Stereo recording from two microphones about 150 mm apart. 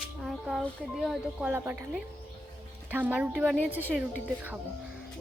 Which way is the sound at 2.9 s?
10° right (ahead or behind).